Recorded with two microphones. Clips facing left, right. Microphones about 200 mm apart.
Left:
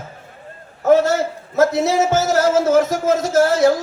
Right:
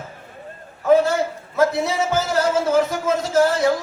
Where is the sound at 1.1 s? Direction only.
45° left (ahead or behind).